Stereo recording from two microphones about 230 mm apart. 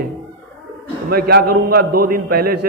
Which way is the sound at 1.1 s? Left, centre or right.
Right.